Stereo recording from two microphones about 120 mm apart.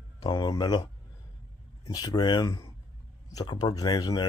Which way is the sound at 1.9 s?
35° left (ahead or behind).